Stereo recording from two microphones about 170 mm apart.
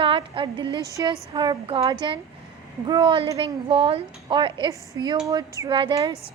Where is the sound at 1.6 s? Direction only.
35° right (ahead or behind).